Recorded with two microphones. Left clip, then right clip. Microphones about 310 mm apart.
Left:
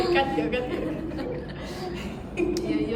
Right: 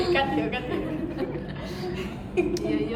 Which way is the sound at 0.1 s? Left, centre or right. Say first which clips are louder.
Left 1 dB; centre.